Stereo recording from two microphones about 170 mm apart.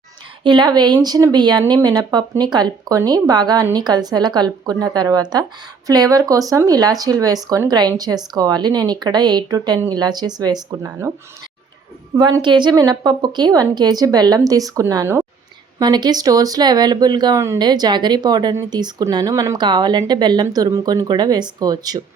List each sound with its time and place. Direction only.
0.4 s speech: 25° right (ahead or behind)
12.1 s speech: 25° right (ahead or behind)